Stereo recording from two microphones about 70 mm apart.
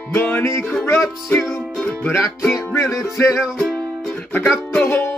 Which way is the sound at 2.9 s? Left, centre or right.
Left.